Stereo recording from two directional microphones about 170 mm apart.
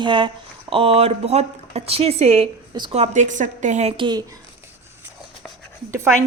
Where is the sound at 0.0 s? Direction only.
30° right (ahead or behind).